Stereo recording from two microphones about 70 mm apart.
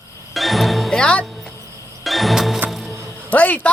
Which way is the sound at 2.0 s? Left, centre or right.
Centre.